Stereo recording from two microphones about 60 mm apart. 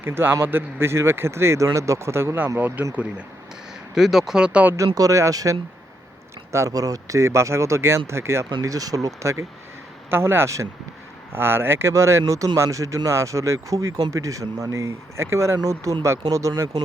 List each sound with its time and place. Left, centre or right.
0.0 s a man's voice: right
2.6 s a man's voice: right
3.9 s speech: centre
4.8 s speech: right
6.7 s speech: right
8.7 s speech: right
10.1 s speech: right